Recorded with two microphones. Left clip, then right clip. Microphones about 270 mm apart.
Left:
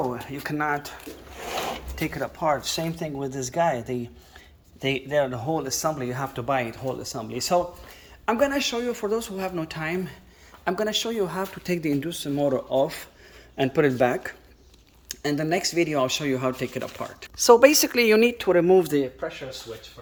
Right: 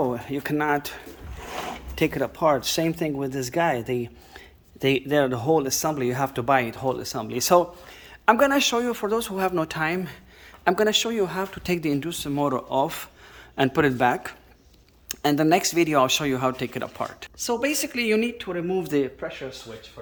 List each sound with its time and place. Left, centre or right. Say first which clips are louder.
0.1 s speech: right 4 dB; right
2.0 s speech: right 7 dB; right; by 17.2 s centre
17.4 s speech: left 10 dB; centre
18.8 s speech: left 2 dB; centre